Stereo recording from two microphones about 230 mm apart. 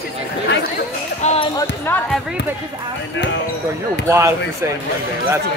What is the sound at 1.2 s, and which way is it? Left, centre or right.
Basketball bounce, left.